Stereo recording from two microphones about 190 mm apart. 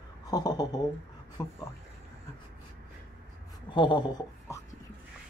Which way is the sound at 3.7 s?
25° left (ahead or behind).